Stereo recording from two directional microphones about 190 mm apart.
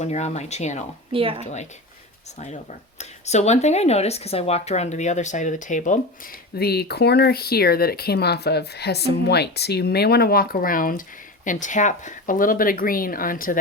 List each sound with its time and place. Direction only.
0.0 s speech: 35° left (ahead or behind)
1.1 s speech: 30° right (ahead or behind)
3.0 s speech: 35° left (ahead or behind)
6.6 s speech: 55° left (ahead or behind)